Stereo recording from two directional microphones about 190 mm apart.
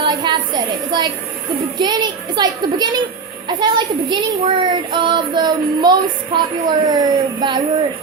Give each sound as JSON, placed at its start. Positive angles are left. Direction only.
{"t": 0.0, "sound": "a woman's voice", "side_deg": -25}